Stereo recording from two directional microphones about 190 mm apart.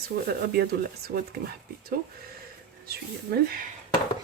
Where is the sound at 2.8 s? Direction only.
55° right (ahead or behind).